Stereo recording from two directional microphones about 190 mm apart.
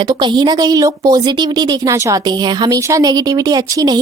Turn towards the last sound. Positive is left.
turn(degrees=-20)  # may be behind; listen again after turning